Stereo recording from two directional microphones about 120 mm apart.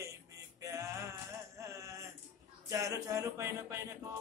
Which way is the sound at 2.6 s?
25° right (ahead or behind).